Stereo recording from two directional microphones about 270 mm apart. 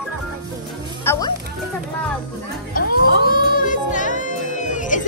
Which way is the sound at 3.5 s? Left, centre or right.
Left.